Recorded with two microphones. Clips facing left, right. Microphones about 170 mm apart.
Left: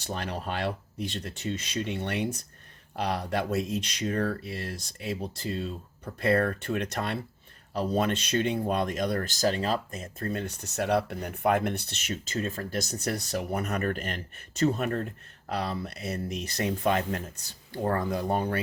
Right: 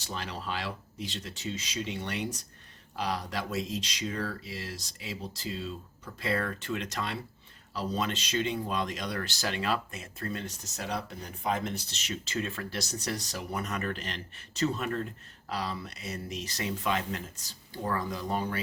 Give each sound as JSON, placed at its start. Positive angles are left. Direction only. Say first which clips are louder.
{"t": 0.0, "sound": "speech", "louder": "left 4 dB", "side_deg": 55}